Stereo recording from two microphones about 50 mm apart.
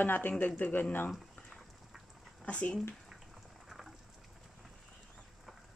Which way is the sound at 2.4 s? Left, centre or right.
Left.